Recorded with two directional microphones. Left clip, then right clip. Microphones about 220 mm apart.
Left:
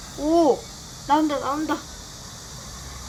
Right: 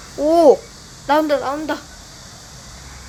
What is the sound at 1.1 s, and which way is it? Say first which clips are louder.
Speech: right 5 dB; 45° right (ahead or behind).